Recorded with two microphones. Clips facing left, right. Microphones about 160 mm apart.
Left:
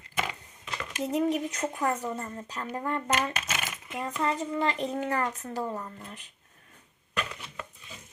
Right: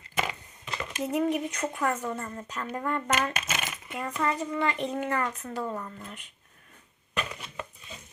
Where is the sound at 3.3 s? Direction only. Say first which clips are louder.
Right 1 dB; centre (ahead or behind).